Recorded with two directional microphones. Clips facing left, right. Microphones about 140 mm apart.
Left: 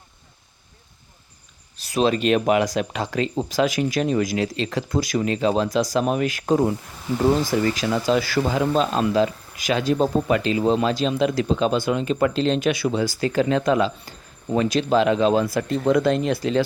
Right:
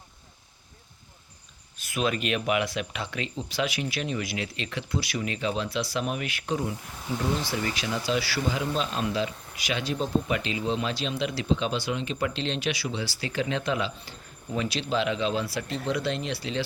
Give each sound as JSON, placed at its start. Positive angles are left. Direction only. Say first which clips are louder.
{"t": 1.7, "sound": "speech", "louder": "left 8 dB", "side_deg": 35}